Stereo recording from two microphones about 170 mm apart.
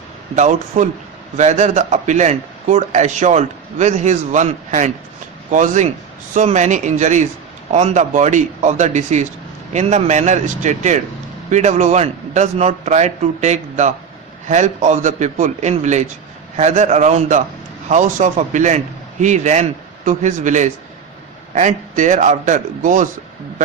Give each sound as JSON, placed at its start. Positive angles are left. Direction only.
{"t": 0.3, "sound": "a man's voice", "side_deg": -45}